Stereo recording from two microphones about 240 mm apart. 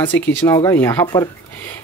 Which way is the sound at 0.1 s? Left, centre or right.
Centre.